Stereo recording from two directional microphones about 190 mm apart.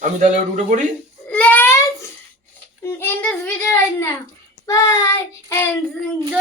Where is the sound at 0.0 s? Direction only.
40° right (ahead or behind).